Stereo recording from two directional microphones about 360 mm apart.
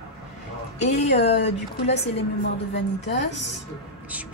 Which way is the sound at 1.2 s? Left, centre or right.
Centre.